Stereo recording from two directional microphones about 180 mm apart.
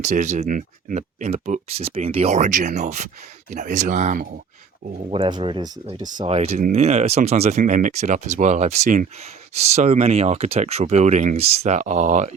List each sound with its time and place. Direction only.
0.0 s speech: 40° right (ahead or behind)
5.0 s speech: 30° right (ahead or behind)